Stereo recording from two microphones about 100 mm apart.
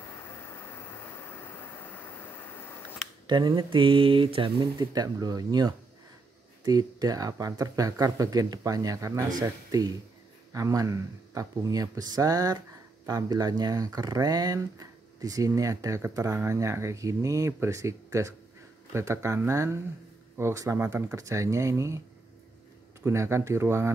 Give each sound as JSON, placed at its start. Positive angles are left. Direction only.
{"t": 0.2, "sound": "vehicle", "side_deg": 25}
{"t": 3.3, "sound": "speech", "side_deg": -50}
{"t": 23.0, "sound": "speech", "side_deg": -25}